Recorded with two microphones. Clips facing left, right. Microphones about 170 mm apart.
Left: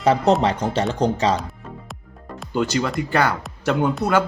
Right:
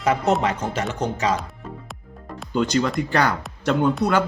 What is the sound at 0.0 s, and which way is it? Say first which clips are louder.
Speech: left 3 dB; 35° left (ahead or behind).